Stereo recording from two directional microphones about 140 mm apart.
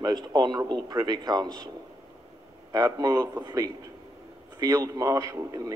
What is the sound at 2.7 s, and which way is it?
A man's voice, 25° right (ahead or behind).